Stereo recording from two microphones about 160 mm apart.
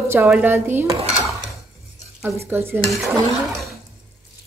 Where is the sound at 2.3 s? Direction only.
15° right (ahead or behind).